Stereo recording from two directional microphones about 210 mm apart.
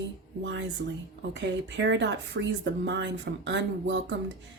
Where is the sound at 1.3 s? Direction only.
60° right (ahead or behind).